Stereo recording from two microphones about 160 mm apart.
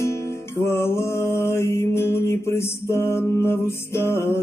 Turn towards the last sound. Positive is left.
turn(degrees=15)  # may be behind; listen again after turning